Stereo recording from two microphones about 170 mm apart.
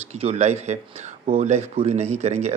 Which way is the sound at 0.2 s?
40° right (ahead or behind).